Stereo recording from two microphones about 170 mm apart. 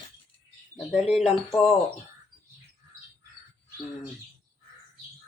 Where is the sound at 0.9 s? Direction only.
5° right (ahead or behind).